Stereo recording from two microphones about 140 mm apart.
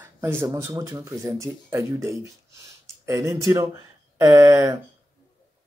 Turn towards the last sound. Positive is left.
turn(degrees=-20)  # may be behind; listen again after turning